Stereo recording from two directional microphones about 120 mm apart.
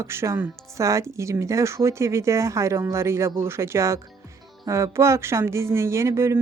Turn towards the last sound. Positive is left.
turn(degrees=-25)  # may be behind; listen again after turning